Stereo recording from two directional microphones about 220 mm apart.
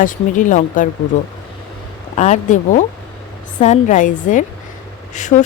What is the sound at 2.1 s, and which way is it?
Speech, 30° left (ahead or behind).